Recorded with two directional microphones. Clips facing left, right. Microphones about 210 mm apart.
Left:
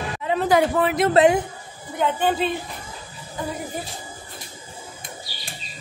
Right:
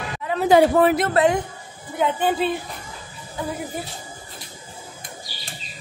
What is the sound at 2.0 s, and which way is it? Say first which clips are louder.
Speech: even; 10° right (ahead or behind).